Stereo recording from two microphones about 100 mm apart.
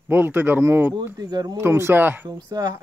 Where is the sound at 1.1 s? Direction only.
40° right (ahead or behind).